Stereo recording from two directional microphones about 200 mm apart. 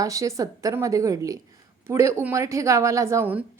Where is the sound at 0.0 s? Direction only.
15° right (ahead or behind).